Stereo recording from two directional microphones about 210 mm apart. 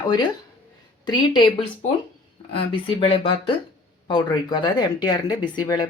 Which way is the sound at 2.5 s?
25° left (ahead or behind).